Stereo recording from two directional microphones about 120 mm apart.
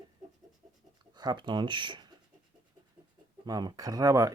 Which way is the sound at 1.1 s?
35° right (ahead or behind).